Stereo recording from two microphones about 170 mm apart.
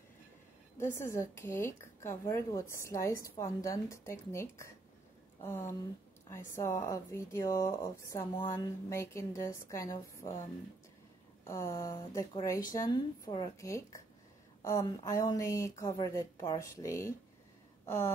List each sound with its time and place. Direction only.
0.7 s speech: 15° left (ahead or behind)
11.4 s a woman's voice: 20° left (ahead or behind)
17.8 s a sound: 15° left (ahead or behind)